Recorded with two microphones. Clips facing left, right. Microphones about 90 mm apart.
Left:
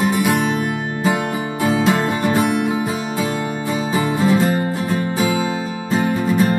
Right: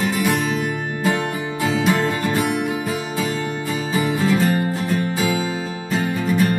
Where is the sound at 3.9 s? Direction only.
30° left (ahead or behind).